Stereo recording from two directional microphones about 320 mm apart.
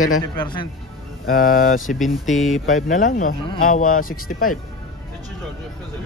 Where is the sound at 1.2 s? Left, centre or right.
Left.